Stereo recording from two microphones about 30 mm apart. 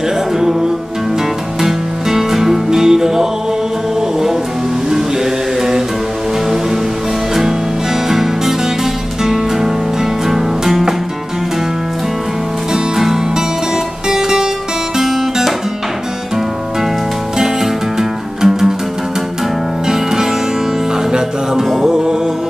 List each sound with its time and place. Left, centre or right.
1.6 s music: centre
4.9 s mantra: centre
8.1 s music: centre
12.7 s music: centre
15.0 s guitar: centre
17.9 s music: centre
19.9 s music: centre
21.7 s music: centre